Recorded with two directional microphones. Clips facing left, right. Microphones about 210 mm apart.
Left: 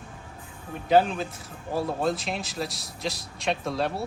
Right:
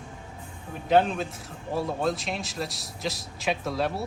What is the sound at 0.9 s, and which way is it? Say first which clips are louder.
A man's voice: left 1 dB; centre (ahead or behind).